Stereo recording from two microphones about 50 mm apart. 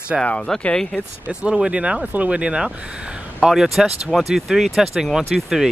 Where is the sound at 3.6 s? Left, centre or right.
Centre.